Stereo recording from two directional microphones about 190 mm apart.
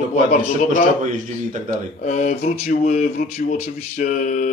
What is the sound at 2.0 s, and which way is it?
A man's voice, 40° left (ahead or behind).